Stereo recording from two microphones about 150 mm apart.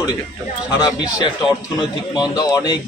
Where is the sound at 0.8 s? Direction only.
30° left (ahead or behind).